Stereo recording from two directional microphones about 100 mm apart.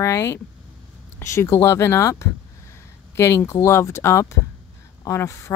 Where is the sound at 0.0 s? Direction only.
30° left (ahead or behind).